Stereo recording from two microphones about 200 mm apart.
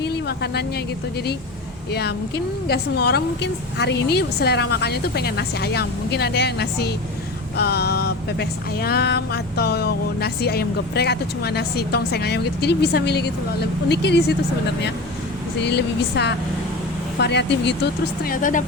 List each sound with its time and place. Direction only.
0.0 s vehicle: 55° left (ahead or behind)
1.9 s a sound: 55° left (ahead or behind)
13.8 s speech: 60° left (ahead or behind)
15.6 s speech: 55° left (ahead or behind)
18.2 s speech: 45° left (ahead or behind)